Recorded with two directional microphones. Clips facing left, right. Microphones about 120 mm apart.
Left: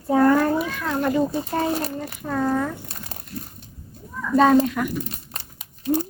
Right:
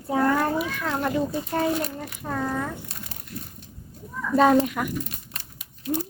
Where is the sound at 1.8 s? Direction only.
35° left (ahead or behind).